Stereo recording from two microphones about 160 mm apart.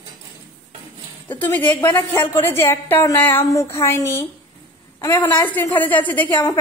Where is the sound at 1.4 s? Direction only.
10° left (ahead or behind).